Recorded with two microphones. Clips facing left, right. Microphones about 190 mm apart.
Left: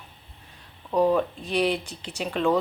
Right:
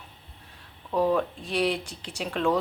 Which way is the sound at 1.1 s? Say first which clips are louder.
Left 2 dB; centre (ahead or behind).